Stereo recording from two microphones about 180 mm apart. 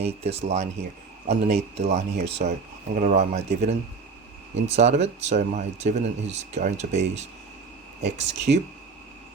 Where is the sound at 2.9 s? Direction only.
45° right (ahead or behind).